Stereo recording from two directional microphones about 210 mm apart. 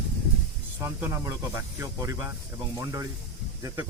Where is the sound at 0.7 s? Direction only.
10° right (ahead or behind).